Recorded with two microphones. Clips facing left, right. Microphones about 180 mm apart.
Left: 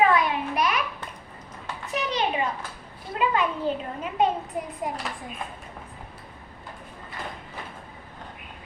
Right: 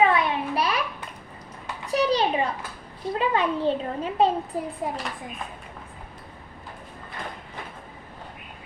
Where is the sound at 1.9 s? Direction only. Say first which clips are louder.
Right 5 dB; 35° right (ahead or behind).